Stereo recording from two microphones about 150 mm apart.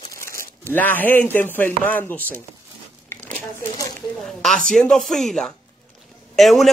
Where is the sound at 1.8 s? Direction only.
15° left (ahead or behind).